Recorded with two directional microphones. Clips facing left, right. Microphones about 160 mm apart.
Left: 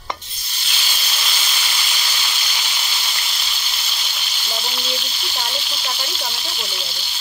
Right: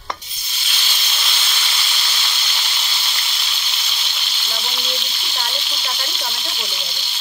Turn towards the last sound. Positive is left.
turn(degrees=0)  # may be behind; listen again after turning